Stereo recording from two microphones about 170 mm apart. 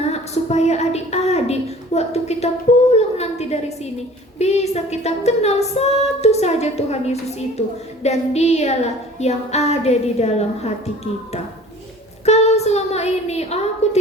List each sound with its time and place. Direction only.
0.0 s a woman's voice: 40° left (ahead or behind)
2.9 s a sound: 40° left (ahead or behind)
12.2 s a woman's voice: 40° left (ahead or behind)